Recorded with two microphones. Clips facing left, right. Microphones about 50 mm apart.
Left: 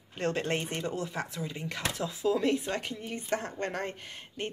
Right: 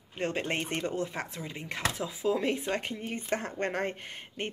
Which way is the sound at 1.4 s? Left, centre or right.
Centre.